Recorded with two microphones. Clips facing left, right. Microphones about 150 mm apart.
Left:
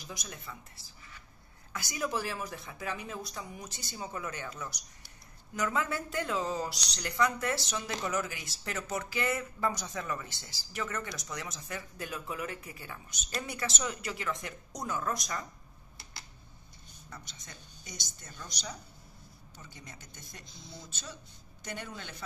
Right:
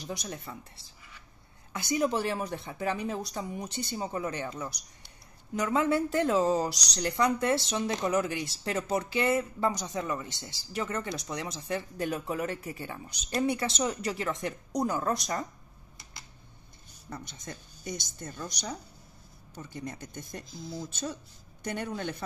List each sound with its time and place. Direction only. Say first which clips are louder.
0.0 s a woman's voice: right 7 dB; 35° right (ahead or behind)
1.7 s a woman's voice: right 7 dB; 25° right (ahead or behind)
6.2 s speech: right 8 dB; 40° right (ahead or behind)
9.7 s a woman's voice: right 4 dB; 15° right (ahead or behind); by 15.4 s 35° right (ahead or behind)
17.1 s speech: right 9 dB; 50° right (ahead or behind)
19.5 s speech: right 12 dB; 55° right (ahead or behind)
20.4 s speech: right 10 dB; centre (ahead or behind)
20.9 s speech: right 10 dB; 50° right (ahead or behind)